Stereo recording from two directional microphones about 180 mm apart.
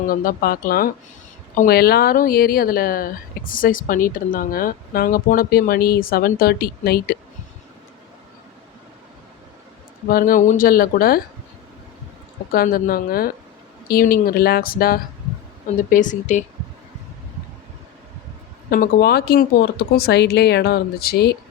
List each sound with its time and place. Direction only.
0.1 s speech: 50° left (ahead or behind)
10.1 s speech: 55° left (ahead or behind)
12.5 s speech: 55° left (ahead or behind)
15.6 s speech: 45° left (ahead or behind)
18.7 s speech: 55° left (ahead or behind)